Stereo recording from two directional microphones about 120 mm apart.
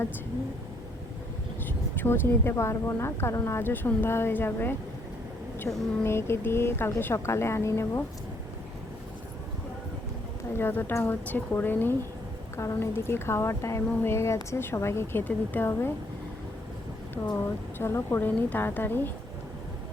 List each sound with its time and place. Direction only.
1.6 s a woman's voice: 15° left (ahead or behind)
10.5 s a woman's voice: 20° left (ahead or behind)
17.2 s a woman's voice: 20° left (ahead or behind)